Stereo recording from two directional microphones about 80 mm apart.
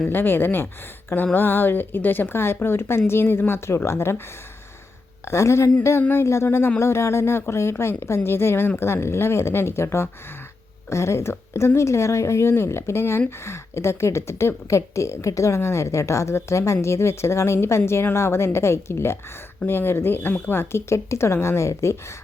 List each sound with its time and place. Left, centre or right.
0.1 s speech: left
5.3 s speech: left